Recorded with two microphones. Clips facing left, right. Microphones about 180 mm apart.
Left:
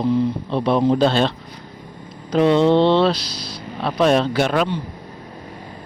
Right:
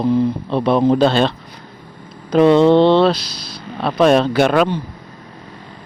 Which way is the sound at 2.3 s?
55° right (ahead or behind).